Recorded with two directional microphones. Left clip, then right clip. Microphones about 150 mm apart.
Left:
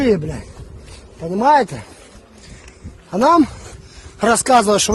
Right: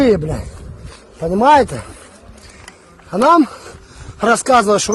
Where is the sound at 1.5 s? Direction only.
Centre (ahead or behind).